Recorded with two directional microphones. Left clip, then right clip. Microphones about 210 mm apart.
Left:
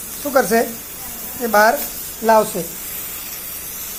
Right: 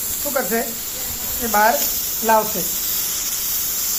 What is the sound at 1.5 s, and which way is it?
Speech, 40° left (ahead or behind).